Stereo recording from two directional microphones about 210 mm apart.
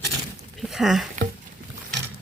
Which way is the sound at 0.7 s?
Centre (ahead or behind).